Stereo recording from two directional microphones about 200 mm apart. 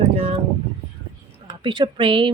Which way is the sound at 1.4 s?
20° right (ahead or behind).